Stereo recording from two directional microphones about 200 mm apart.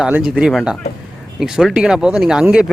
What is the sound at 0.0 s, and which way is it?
Speech, 5° right (ahead or behind).